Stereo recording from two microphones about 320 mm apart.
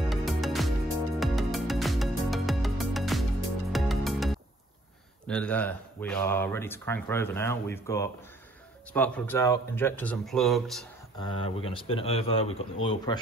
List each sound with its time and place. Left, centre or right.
0.1 s music: centre
5.2 s speech: centre
11.1 s speech: centre